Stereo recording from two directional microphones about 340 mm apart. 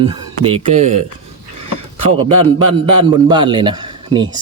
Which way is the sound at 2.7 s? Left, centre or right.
Centre.